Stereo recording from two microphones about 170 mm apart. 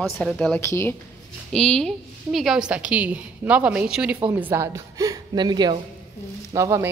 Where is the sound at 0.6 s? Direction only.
15° left (ahead or behind).